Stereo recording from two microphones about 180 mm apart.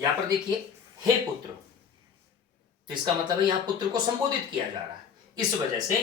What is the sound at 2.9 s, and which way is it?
Speech, 25° right (ahead or behind).